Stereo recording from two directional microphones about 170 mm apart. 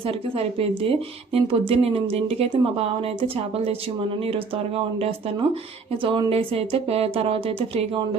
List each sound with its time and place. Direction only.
0.0 s speech: 35° right (ahead or behind)